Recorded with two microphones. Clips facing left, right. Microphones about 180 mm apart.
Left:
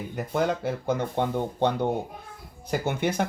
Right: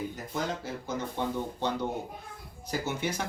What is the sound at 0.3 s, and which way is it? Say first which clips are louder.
Speech: left 8 dB; 60° left (ahead or behind).